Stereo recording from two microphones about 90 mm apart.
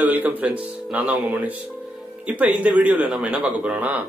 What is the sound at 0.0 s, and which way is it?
A man's voice, 20° right (ahead or behind).